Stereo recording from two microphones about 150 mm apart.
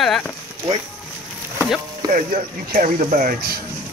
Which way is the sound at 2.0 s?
65° right (ahead or behind).